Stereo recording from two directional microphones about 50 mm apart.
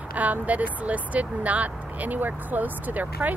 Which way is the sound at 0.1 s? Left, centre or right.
Right.